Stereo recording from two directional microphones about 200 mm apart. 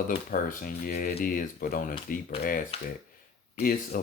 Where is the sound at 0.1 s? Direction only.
45° left (ahead or behind).